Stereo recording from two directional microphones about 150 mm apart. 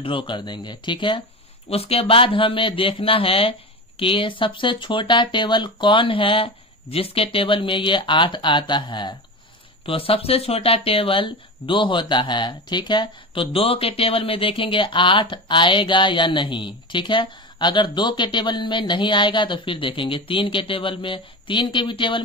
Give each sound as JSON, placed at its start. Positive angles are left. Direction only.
{"t": 0.0, "sound": "speech", "side_deg": 35}